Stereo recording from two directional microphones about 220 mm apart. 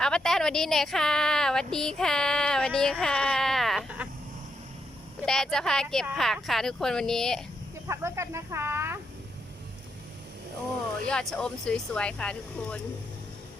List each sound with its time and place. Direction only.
0.0 s speech: centre (ahead or behind)
5.2 s speech: centre (ahead or behind)
7.9 s speech: 10° right (ahead or behind)
11.1 s speech: centre (ahead or behind)